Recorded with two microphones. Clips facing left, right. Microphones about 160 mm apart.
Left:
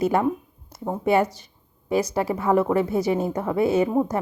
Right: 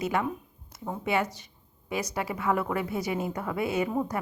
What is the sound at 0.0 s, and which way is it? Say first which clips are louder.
A woman's voice: left 8 dB; 35° left (ahead or behind).